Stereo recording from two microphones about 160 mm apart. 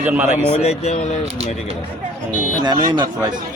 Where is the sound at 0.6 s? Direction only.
40° left (ahead or behind).